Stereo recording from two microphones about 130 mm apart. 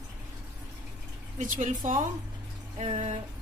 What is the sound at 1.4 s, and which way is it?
Speech, 75° right (ahead or behind).